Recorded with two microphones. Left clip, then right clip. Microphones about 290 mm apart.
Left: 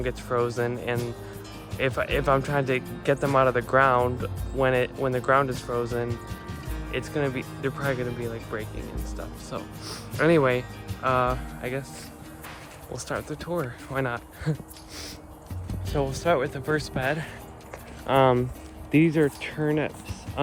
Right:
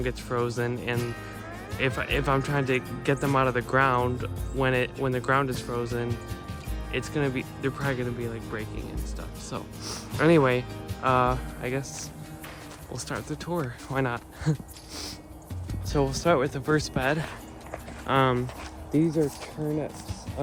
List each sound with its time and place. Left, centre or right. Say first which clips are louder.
0.0 s speech: left 3 dB; centre
12.9 s speech: left 3 dB; centre
15.9 s speech: even; centre
18.0 s speech: left 4 dB; centre
18.9 s speech: left 4 dB; left